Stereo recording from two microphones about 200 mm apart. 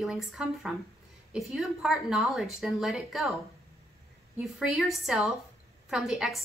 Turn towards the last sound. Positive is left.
turn(degrees=0)  # may be behind; listen again after turning